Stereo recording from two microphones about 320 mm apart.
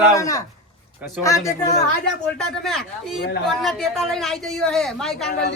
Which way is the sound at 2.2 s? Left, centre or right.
Centre.